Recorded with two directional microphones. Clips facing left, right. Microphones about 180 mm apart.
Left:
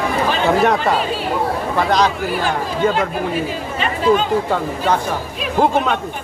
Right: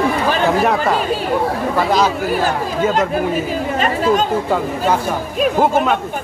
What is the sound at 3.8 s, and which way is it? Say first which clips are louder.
Speech: left 1 dB; 45° right (ahead or behind).